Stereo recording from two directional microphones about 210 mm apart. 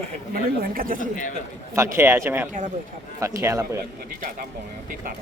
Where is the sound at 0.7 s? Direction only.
40° right (ahead or behind).